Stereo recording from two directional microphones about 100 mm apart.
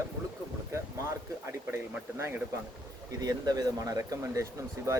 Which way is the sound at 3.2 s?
40° right (ahead or behind).